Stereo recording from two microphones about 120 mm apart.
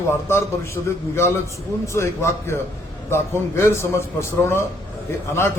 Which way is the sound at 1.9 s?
20° left (ahead or behind).